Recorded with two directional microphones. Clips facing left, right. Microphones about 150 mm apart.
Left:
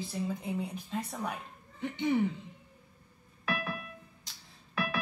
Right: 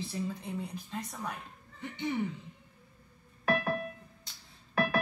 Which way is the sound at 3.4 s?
50° right (ahead or behind).